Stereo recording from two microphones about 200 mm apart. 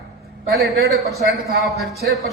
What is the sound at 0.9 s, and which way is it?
A man's voice, centre (ahead or behind).